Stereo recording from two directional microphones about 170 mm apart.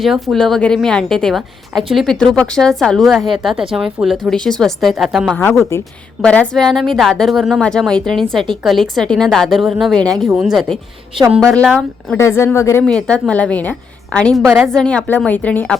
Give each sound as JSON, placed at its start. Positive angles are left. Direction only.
{"t": 0.0, "sound": "speech", "side_deg": 0}
{"t": 12.1, "sound": "a woman's voice", "side_deg": 15}
{"t": 12.8, "sound": "a woman's voice", "side_deg": 5}